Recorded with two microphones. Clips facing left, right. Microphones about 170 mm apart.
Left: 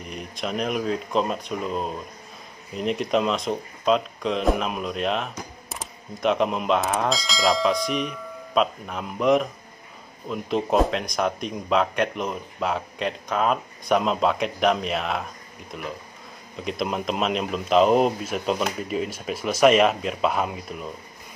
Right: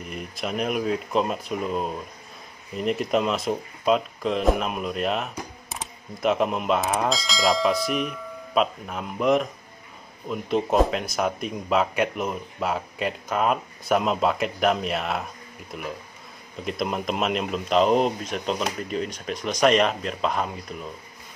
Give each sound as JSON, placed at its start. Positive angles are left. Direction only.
{"t": 0.0, "sound": "speech", "side_deg": -5}